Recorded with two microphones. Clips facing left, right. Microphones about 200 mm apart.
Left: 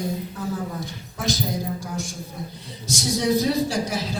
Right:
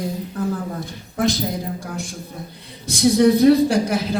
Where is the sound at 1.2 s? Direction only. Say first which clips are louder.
Right 7 dB; 55° right (ahead or behind).